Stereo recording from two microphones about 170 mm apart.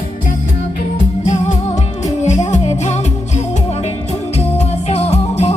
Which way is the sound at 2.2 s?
45° left (ahead or behind).